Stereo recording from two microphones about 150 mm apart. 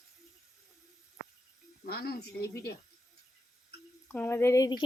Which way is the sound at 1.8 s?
90° left.